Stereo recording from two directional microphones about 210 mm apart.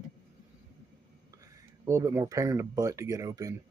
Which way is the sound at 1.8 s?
15° right (ahead or behind).